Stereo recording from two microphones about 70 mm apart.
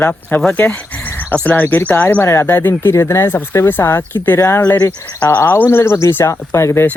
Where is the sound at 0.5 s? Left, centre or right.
Centre.